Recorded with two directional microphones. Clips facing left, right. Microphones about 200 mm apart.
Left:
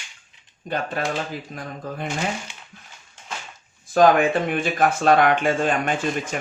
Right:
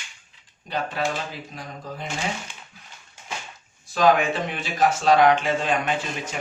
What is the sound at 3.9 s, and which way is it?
Speech, 50° left (ahead or behind).